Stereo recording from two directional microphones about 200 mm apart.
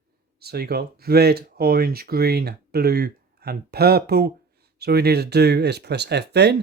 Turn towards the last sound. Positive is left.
turn(degrees=-55)  # may be behind; listen again after turning